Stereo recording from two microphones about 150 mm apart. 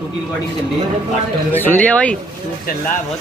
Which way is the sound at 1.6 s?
10° left (ahead or behind).